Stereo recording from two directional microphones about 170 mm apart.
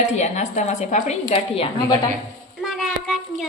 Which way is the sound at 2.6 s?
Centre (ahead or behind).